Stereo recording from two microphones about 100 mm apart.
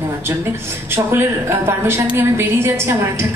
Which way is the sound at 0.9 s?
25° right (ahead or behind).